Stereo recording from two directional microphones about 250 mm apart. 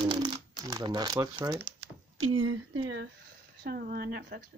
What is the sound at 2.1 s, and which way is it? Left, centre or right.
Speech, right.